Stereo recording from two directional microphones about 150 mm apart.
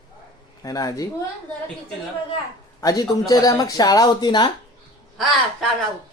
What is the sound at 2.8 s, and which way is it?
Speech, 25° left (ahead or behind).